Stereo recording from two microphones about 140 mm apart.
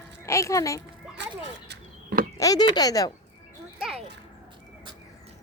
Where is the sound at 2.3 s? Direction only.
25° left (ahead or behind).